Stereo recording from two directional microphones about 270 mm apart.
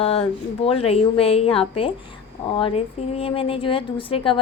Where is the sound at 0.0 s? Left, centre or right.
Left.